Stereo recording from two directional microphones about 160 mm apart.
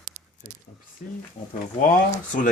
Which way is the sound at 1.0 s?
60° left (ahead or behind).